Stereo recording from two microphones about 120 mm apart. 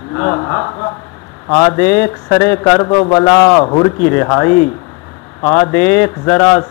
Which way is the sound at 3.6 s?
40° left (ahead or behind).